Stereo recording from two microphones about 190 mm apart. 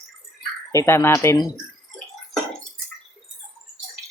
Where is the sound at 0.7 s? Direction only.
15° left (ahead or behind).